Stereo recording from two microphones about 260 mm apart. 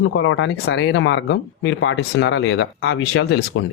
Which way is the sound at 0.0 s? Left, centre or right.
Left.